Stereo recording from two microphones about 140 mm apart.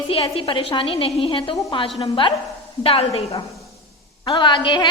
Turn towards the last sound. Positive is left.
turn(degrees=35)  # may be behind; listen again after turning